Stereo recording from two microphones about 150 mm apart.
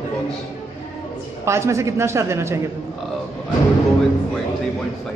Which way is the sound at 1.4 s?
20° right (ahead or behind).